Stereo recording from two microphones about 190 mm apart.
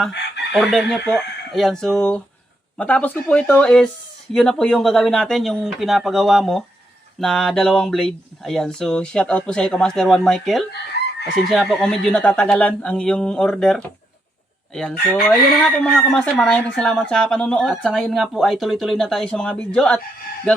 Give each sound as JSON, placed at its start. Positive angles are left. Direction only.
{"t": 0.1, "sound": "chicken", "side_deg": 65}
{"t": 0.5, "sound": "speech", "side_deg": 0}
{"t": 11.0, "sound": "chicken", "side_deg": 60}
{"t": 11.7, "sound": "speech", "side_deg": 5}
{"t": 14.7, "sound": "chicken", "side_deg": 5}
{"t": 15.2, "sound": "speech", "side_deg": 0}